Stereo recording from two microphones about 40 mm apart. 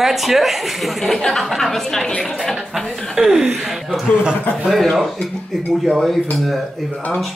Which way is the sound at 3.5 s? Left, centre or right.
Centre.